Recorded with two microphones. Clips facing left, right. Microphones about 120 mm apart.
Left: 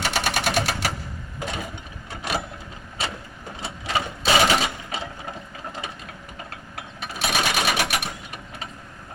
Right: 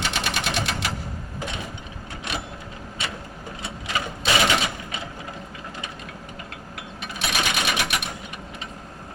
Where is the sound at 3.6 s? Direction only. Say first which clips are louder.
Left 3 dB; 35° left (ahead or behind).